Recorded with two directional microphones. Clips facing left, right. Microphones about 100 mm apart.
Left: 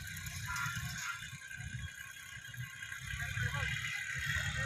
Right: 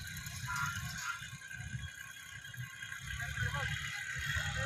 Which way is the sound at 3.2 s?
20° right (ahead or behind).